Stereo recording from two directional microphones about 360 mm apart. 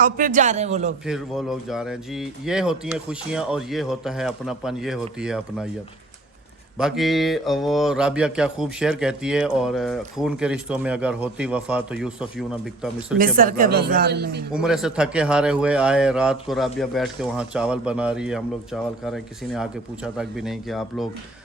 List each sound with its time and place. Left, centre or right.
0.0 s speech: right
1.0 s speech: centre
6.7 s speech: centre
13.1 s speech: right
14.5 s speech: centre